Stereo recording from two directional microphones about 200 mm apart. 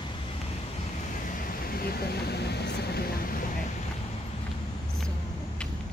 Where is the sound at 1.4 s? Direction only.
50° left (ahead or behind).